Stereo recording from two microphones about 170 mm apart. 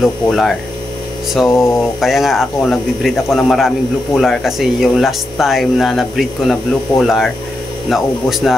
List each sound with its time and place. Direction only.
0.0 s speech: centre (ahead or behind)